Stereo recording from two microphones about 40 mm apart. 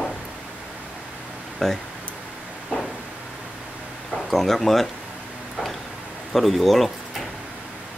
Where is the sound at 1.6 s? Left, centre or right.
Centre.